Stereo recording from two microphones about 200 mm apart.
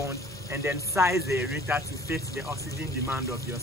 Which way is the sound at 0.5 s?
15° right (ahead or behind).